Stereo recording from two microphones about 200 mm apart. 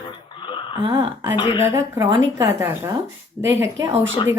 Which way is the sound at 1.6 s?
15° right (ahead or behind).